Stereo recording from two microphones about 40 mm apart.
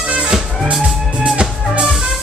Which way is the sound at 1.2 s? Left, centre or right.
Right.